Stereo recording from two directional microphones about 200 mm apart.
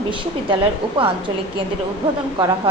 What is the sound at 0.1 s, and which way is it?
A woman's voice, 25° right (ahead or behind).